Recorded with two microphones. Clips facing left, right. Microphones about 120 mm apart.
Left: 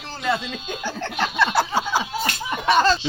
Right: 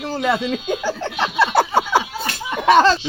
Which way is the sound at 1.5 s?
55° right (ahead or behind).